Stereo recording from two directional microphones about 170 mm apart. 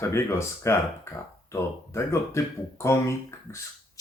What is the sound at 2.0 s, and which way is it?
Speech, 15° left (ahead or behind).